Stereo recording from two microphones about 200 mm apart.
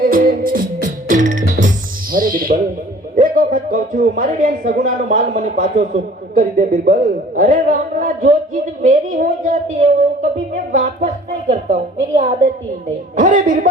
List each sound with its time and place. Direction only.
0.0 s music: 45° right (ahead or behind)
3.2 s a woman's voice: 45° right (ahead or behind)